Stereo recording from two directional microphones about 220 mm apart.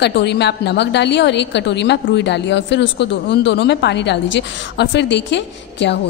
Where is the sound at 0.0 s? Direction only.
50° left (ahead or behind).